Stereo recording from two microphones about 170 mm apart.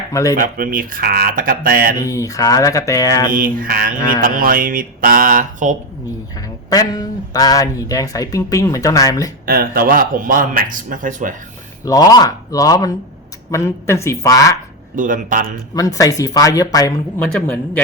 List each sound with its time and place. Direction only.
0.1 s speech: 20° left (ahead or behind)
0.3 s a sound: 55° right (ahead or behind)
2.0 s speech: 20° left (ahead or behind)
3.3 s a sound: 55° right (ahead or behind)
6.7 s speech: 20° left (ahead or behind)
9.5 s speech: 60° right (ahead or behind)
11.9 s speech: 25° left (ahead or behind)
14.9 s speech: 50° right (ahead or behind)
15.7 s speech: 20° left (ahead or behind)
17.4 s speech: 10° left (ahead or behind)